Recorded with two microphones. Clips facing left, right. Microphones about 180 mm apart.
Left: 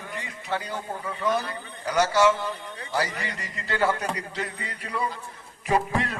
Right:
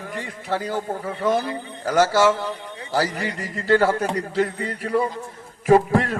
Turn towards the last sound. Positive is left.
turn(degrees=-45)  # may be behind; listen again after turning